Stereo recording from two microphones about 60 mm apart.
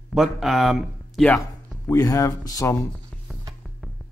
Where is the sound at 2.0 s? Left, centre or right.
Left.